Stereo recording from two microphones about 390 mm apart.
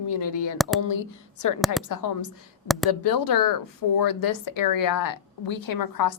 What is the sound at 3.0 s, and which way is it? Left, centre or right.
A woman's voice, left.